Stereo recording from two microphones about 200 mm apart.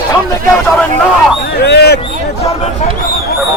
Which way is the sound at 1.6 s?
55° left (ahead or behind).